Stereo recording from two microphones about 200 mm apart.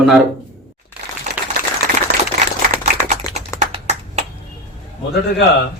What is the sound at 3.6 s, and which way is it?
Finger snapping, 35° right (ahead or behind).